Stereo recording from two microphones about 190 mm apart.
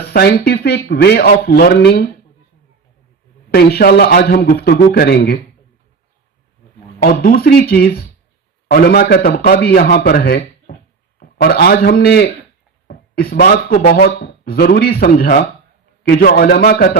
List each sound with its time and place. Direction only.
0.0 s a man's voice: 55° left (ahead or behind)
3.5 s a man's voice: 55° left (ahead or behind)
7.0 s a man's voice: 55° left (ahead or behind)